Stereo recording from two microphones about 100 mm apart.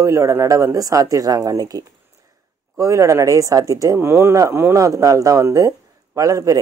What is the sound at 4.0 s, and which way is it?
Speech, 25° right (ahead or behind).